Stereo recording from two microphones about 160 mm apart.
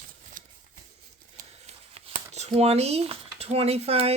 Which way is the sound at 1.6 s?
40° right (ahead or behind).